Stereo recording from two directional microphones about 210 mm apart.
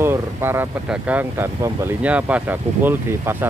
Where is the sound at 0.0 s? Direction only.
10° right (ahead or behind).